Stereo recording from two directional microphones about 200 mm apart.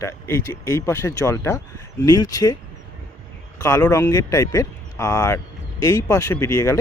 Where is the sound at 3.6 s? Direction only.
15° left (ahead or behind).